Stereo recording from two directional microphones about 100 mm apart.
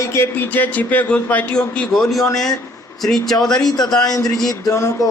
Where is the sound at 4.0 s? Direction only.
40° left (ahead or behind).